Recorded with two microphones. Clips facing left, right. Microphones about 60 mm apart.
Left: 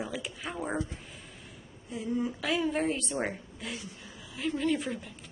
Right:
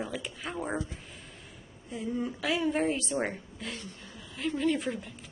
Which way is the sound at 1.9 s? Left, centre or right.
Centre.